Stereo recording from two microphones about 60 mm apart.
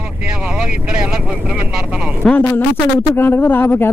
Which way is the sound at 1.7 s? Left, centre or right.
Centre.